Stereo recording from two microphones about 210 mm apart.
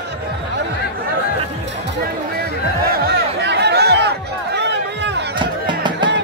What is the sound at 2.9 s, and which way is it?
Chatter, 50° right (ahead or behind).